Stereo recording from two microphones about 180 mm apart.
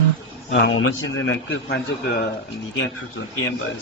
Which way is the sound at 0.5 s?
90° left.